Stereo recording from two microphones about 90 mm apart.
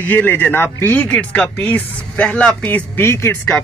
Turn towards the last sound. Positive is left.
turn(degrees=30)  # may be behind; listen again after turning